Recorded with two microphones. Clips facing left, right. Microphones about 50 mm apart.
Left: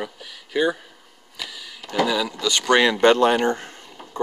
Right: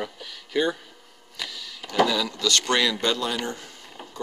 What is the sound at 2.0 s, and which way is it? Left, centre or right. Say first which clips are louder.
Speech: left 3 dB; centre.